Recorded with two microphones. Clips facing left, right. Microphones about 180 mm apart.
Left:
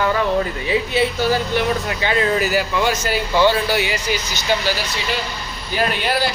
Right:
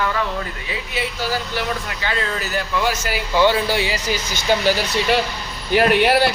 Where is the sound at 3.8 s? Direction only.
30° right (ahead or behind).